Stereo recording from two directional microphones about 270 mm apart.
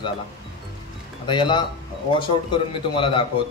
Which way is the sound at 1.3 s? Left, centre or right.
Centre.